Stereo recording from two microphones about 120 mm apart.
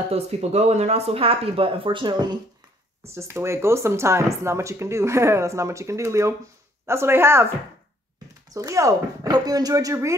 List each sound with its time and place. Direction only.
0.1 s speech: 60° right (ahead or behind); by 2.3 s 40° right (ahead or behind)
3.2 s speech: 25° right (ahead or behind)
8.5 s speech: 30° right (ahead or behind)